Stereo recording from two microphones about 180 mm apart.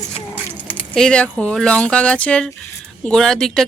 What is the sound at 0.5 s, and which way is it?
A man's voice, 5° left (ahead or behind).